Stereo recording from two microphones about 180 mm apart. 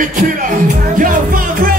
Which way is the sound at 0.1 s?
45° right (ahead or behind).